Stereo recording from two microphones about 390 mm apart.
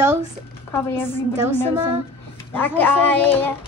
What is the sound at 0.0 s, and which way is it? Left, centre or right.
Speech, centre.